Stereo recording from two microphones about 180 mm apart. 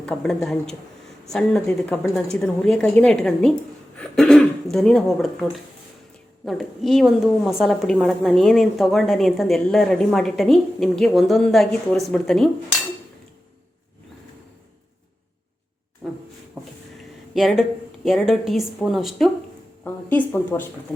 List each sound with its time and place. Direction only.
0.0 s a woman's voice: 5° left (ahead or behind)
16.0 s a sound: 5° right (ahead or behind)
17.3 s a woman's voice: centre (ahead or behind)
19.8 s speech: 10° left (ahead or behind)